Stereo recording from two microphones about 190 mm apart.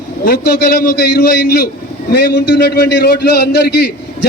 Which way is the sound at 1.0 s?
60° left (ahead or behind).